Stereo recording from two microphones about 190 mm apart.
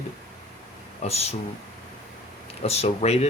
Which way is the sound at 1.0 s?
35° left (ahead or behind).